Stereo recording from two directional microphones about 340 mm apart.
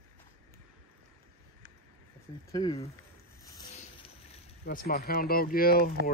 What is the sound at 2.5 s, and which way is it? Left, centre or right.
Dog, centre.